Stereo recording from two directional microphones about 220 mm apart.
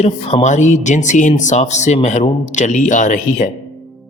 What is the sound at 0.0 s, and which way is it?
Speech, 30° left (ahead or behind).